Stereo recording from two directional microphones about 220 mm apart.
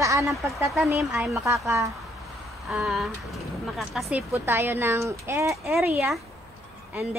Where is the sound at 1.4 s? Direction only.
15° right (ahead or behind).